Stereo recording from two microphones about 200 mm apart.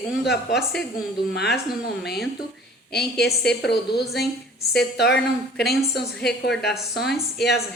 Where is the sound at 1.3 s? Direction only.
55° left (ahead or behind).